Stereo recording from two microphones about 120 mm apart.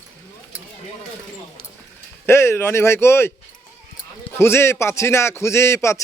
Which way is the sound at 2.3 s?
20° left (ahead or behind).